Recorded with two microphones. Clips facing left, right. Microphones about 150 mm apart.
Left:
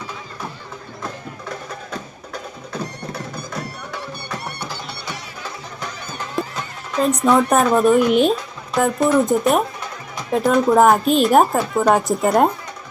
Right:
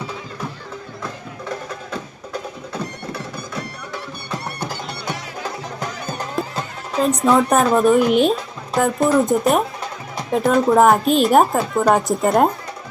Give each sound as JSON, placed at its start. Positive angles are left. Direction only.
{"t": 4.7, "sound": "music", "side_deg": -45}
{"t": 7.0, "sound": "speech", "side_deg": 0}